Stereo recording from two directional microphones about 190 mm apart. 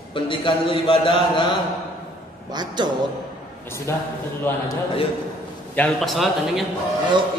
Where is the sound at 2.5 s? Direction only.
20° right (ahead or behind).